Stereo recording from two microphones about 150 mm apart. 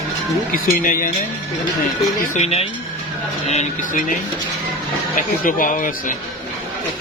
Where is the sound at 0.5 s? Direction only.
70° left (ahead or behind).